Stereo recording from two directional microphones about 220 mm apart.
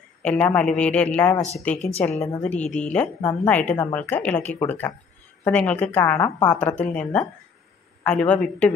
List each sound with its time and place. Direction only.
0.2 s a man's voice: 5° left (ahead or behind)
1.8 s a woman's voice: 30° left (ahead or behind)
2.2 s a woman's voice: 5° left (ahead or behind)